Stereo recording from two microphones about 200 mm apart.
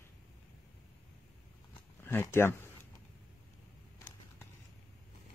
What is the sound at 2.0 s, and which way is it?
Speech, 10° left (ahead or behind).